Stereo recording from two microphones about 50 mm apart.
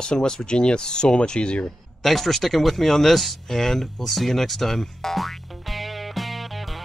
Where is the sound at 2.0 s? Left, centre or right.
Centre.